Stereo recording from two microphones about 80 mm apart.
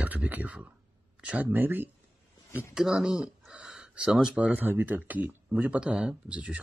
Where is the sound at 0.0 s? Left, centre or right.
Centre.